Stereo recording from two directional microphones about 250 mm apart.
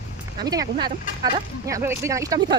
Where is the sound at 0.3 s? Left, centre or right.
Centre.